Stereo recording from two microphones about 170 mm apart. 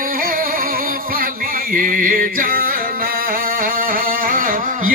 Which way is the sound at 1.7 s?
55° right (ahead or behind).